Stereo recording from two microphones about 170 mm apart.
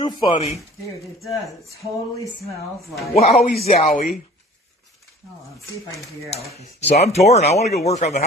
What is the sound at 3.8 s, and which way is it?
Speech, 55° left (ahead or behind).